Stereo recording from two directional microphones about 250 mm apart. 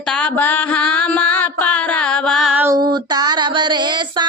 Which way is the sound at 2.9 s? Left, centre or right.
Centre.